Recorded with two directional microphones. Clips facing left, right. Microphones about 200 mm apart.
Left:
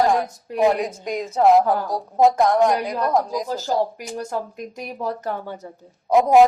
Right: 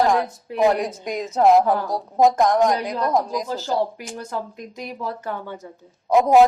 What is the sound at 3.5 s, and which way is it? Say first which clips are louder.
Speech: left 1 dB; 40° left (ahead or behind).